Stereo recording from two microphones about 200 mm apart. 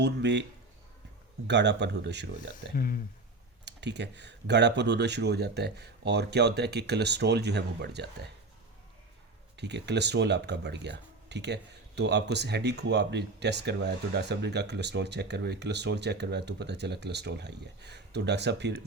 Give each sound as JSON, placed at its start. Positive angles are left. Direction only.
{"t": 0.0, "sound": "speech", "side_deg": -60}
{"t": 1.5, "sound": "speech", "side_deg": -60}
{"t": 2.7, "sound": "speech", "side_deg": 45}
{"t": 3.7, "sound": "speech", "side_deg": -60}
{"t": 9.6, "sound": "speech", "side_deg": -60}